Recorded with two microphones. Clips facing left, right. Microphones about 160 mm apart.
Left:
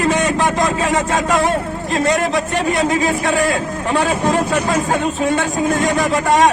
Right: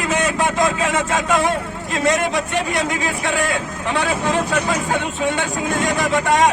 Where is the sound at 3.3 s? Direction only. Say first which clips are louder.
Left 4 dB; 40° left (ahead or behind).